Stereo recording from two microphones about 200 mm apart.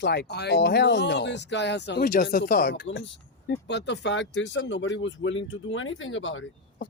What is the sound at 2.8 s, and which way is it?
Speech, 65° left (ahead or behind).